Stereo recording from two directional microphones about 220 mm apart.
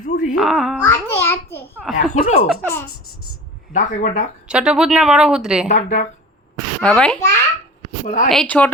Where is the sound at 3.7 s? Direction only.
35° left (ahead or behind).